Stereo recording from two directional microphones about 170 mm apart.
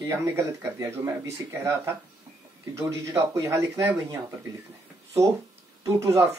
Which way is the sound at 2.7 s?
15° right (ahead or behind).